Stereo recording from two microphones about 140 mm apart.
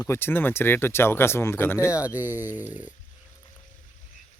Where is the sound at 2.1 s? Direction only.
15° right (ahead or behind).